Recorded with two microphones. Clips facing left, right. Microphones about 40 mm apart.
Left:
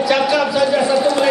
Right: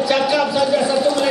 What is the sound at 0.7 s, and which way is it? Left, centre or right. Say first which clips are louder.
Speech: left 1 dB; left.